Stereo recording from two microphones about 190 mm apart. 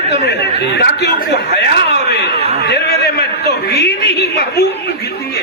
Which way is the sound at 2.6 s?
60° left (ahead or behind).